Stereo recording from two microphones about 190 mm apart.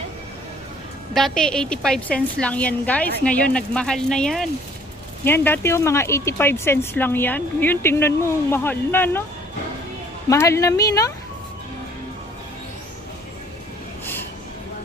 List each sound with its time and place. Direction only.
1.1 s a woman's voice: centre (ahead or behind)
10.2 s speech: 15° left (ahead or behind)